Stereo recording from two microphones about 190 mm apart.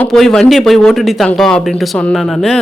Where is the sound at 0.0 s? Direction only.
Centre (ahead or behind).